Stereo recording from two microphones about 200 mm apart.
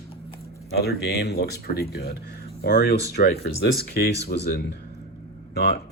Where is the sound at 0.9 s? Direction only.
55° left (ahead or behind).